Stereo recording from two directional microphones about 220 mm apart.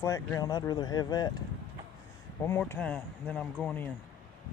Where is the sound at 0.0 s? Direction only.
15° left (ahead or behind).